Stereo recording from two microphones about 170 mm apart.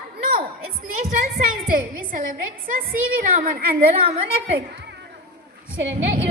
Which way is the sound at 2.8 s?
55° right (ahead or behind).